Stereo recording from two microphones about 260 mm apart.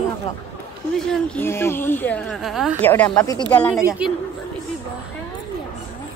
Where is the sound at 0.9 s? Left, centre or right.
Centre.